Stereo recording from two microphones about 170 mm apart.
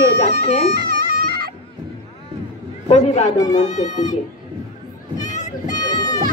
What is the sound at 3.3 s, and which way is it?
Speech, 20° left (ahead or behind).